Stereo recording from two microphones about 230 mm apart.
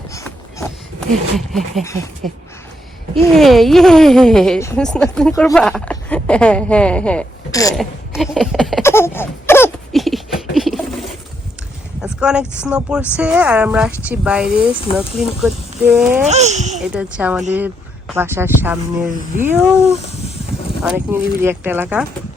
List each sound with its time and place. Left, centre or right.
0.1 s a sound: centre
1.4 s speech: centre
1.8 s speech: centre
3.2 s speech: centre
5.5 s speech: centre
7.8 s speech: centre
8.8 s a sound: centre
12.0 s a sound: centre
12.6 s speech: centre
16.2 s speech: right
16.9 s speech: centre
20.8 s speech: centre